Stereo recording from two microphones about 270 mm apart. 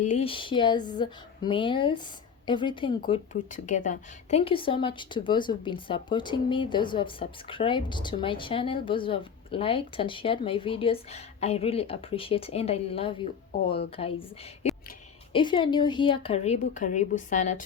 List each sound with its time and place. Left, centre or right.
0.0 s speech: left
3.1 s speech: left